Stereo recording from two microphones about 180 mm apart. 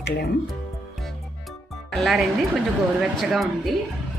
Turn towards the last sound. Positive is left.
turn(degrees=0)  # may be behind; listen again after turning